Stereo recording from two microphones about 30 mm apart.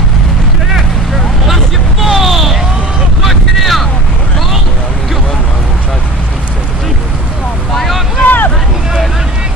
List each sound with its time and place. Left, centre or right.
1.5 s vehicle: centre
7.7 s boat: centre
8.2 s hubbub: left